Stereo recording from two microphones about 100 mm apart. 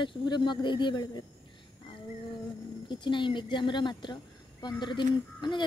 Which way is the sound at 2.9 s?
55° left (ahead or behind).